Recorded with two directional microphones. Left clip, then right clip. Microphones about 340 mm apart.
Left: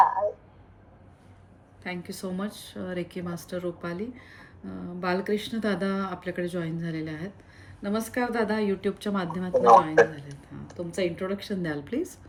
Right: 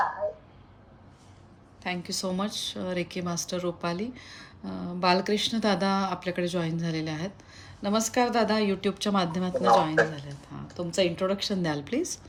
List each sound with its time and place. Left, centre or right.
1.8 s speech: centre